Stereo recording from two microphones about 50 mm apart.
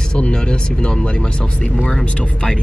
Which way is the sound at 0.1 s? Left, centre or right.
Centre.